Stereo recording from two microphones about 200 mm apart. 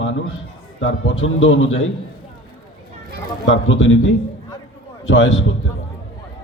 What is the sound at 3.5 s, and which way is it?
Speech, 75° left (ahead or behind).